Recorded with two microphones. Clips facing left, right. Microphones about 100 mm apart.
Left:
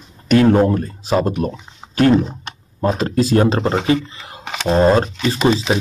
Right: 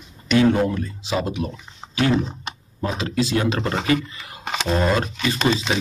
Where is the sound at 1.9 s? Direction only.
45° left (ahead or behind).